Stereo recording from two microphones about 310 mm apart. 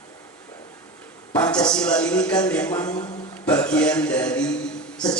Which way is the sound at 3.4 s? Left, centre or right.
Centre.